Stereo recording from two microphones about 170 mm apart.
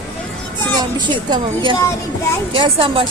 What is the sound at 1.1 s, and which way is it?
A woman's voice, 25° right (ahead or behind).